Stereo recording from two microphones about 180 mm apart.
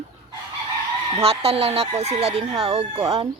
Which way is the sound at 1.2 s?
35° right (ahead or behind).